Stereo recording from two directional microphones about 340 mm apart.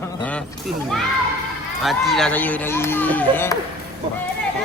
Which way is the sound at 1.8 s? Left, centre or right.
Centre.